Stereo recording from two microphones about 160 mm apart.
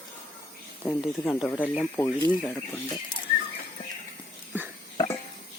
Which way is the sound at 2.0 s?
25° left (ahead or behind).